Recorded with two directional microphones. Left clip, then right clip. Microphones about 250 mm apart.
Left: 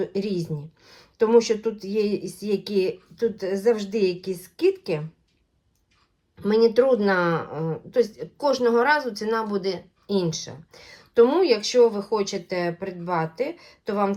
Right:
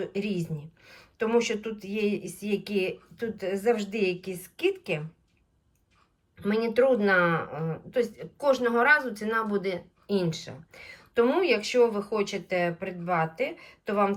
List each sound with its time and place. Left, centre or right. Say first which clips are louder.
0.0 s a woman's voice: left 5 dB; centre
6.4 s a woman's voice: left 5 dB; centre